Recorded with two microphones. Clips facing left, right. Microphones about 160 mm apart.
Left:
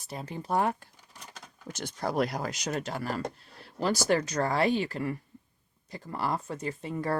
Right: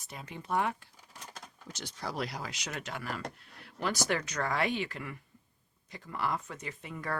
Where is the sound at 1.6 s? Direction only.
50° left (ahead or behind).